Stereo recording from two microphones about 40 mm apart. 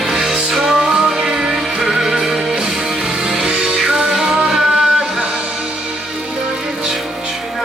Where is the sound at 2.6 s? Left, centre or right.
Centre.